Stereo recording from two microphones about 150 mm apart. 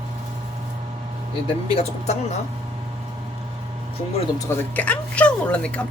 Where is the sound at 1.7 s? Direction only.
45° left (ahead or behind).